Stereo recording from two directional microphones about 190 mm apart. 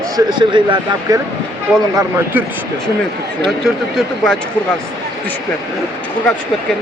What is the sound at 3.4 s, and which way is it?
Speech, centre (ahead or behind).